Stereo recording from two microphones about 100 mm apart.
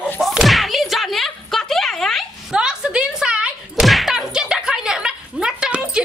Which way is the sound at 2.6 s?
10° right (ahead or behind).